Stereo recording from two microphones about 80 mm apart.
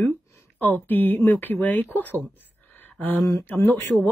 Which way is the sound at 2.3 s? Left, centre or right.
Left.